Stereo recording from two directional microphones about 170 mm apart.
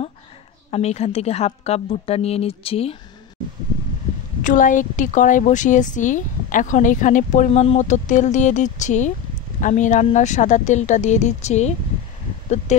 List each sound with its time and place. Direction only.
0.7 s a woman's voice: 40° left (ahead or behind)
4.4 s a woman's voice: 50° left (ahead or behind)